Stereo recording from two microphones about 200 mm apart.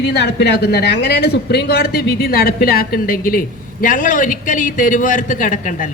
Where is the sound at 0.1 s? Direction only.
60° left (ahead or behind).